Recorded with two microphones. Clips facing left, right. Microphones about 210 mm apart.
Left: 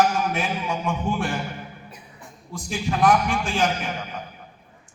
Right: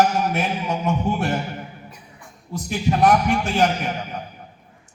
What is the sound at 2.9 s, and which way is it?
Speech, 40° right (ahead or behind).